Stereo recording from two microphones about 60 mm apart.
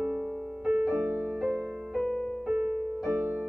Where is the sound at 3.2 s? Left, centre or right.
Centre.